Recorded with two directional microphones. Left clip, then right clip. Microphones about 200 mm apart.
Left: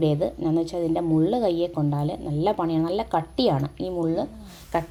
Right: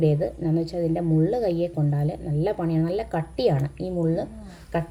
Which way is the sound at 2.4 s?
90° left.